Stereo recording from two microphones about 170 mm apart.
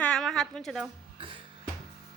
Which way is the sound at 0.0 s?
5° left (ahead or behind).